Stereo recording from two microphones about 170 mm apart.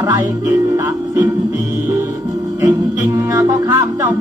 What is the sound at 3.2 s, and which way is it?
Music, 20° right (ahead or behind).